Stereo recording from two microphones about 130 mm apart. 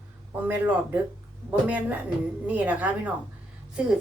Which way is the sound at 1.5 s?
10° right (ahead or behind).